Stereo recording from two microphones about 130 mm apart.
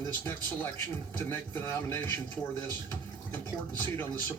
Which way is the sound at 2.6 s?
15° left (ahead or behind).